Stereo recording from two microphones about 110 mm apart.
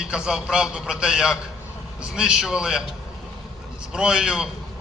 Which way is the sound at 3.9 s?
5° right (ahead or behind).